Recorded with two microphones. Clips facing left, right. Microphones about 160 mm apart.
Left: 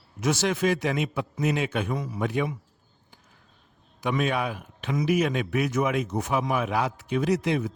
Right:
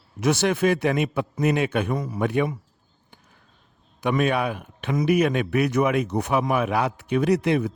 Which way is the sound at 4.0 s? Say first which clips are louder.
Right 4 dB; 55° right (ahead or behind).